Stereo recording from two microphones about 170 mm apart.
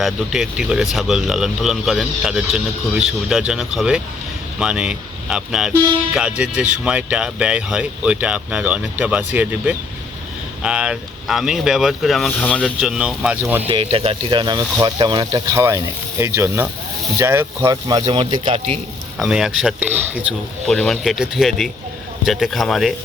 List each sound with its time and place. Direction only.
0.0 s speech: 5° right (ahead or behind)
12.8 s speech: 5° right (ahead or behind)
13.7 s speech: 35° right (ahead or behind)
19.1 s speech: 5° right (ahead or behind)
20.7 s speech: 5° left (ahead or behind)